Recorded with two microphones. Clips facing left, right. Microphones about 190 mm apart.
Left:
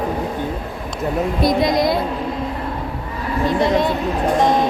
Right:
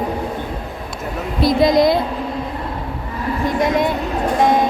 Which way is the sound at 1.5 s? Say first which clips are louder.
Right 5 dB; 25° right (ahead or behind).